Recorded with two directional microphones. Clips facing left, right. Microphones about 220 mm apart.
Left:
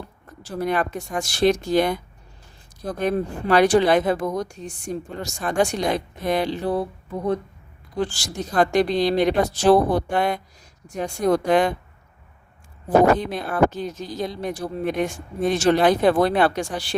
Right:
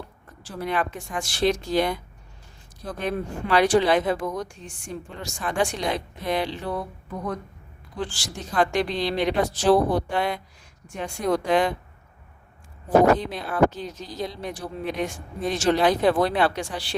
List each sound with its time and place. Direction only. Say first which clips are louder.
0.4 s speech: left 4 dB; 40° left (ahead or behind)
7.9 s speech: left 6 dB; 40° left (ahead or behind)
13.1 s speech: left 1 dB; 50° left (ahead or behind)